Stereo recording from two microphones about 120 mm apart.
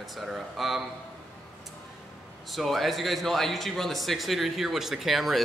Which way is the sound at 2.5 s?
Centre (ahead or behind).